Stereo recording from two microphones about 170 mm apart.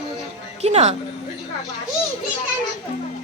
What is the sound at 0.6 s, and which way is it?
Speech, 40° right (ahead or behind).